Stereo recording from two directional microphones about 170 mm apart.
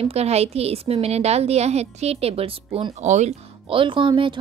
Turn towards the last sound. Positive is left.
turn(degrees=-30)  # may be behind; listen again after turning